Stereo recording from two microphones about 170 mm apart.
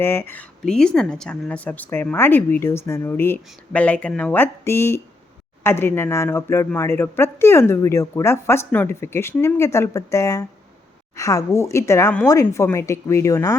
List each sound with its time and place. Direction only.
0.0 s a woman's voice: 15° left (ahead or behind)